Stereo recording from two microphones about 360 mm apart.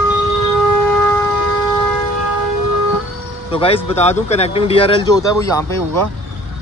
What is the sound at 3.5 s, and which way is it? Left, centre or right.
Speech, centre.